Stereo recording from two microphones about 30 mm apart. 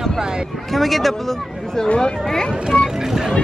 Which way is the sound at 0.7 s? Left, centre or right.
Centre.